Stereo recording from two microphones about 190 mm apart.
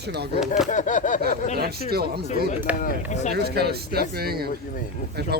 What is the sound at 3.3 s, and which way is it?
Speech, 55° right (ahead or behind).